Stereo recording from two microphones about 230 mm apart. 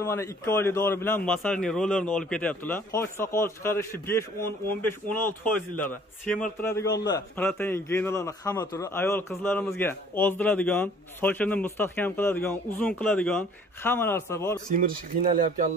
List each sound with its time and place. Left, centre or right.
0.0 s a man's voice: centre
14.8 s speech: right